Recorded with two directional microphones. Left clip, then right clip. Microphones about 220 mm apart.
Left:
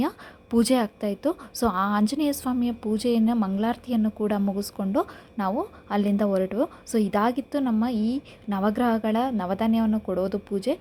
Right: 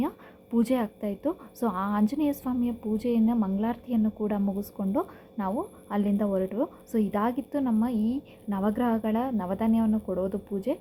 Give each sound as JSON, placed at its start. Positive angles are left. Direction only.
{"t": 0.5, "sound": "a woman's voice", "side_deg": 35}
{"t": 7.9, "sound": "a woman's voice", "side_deg": 75}
{"t": 8.4, "sound": "a woman's voice", "side_deg": 25}